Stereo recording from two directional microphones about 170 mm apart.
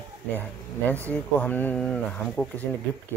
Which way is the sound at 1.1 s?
10° left (ahead or behind).